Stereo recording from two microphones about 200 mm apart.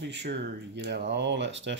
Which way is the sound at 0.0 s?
60° right (ahead or behind).